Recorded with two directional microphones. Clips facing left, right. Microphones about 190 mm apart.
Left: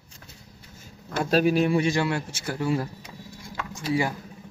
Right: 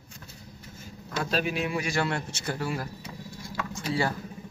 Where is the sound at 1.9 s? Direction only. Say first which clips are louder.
Left 3 dB; 10° left (ahead or behind).